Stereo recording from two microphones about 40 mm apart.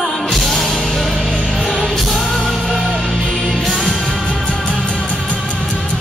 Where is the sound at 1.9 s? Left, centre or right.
Centre.